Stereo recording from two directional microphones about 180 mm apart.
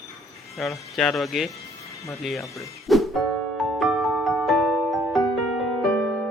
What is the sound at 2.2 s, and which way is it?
Music, centre (ahead or behind).